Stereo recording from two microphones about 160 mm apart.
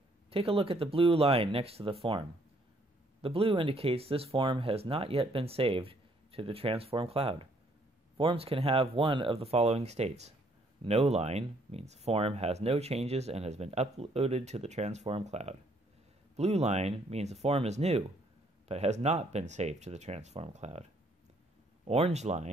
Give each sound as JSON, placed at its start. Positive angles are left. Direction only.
{"t": 0.3, "sound": "speech", "side_deg": -35}
{"t": 21.8, "sound": "speech", "side_deg": -40}